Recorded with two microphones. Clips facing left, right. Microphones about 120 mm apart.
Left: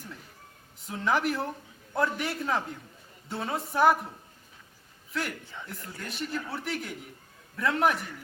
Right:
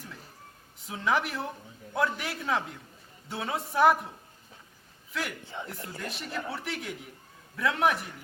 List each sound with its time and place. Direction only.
0.8 s a woman's voice: centre (ahead or behind)
5.1 s a woman's voice: centre (ahead or behind)
5.5 s speech: 25° right (ahead or behind)
6.0 s a woman's voice: centre (ahead or behind)